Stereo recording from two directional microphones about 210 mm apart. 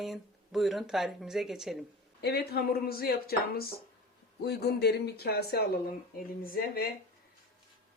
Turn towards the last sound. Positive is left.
turn(degrees=45)  # may be behind; listen again after turning